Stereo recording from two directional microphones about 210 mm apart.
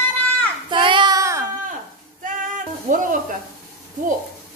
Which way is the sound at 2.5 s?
40° right (ahead or behind).